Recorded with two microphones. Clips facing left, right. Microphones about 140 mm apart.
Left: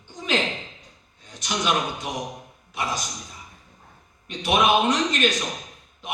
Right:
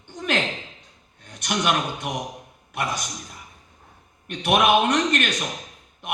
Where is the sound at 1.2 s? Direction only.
60° right (ahead or behind).